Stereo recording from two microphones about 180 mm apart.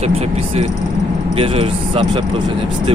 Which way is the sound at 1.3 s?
30° right (ahead or behind).